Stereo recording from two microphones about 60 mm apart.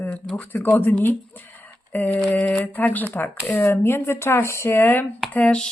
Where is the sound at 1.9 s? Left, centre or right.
Left.